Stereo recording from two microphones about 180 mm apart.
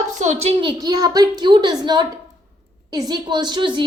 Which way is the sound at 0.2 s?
40° right (ahead or behind).